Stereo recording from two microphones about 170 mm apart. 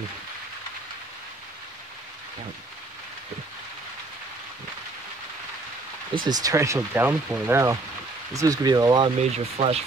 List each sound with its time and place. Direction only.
6.2 s speech: 20° right (ahead or behind)
9.2 s speech: 40° right (ahead or behind)